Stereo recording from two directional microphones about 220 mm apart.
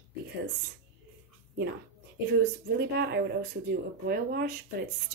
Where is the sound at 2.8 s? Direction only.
50° right (ahead or behind).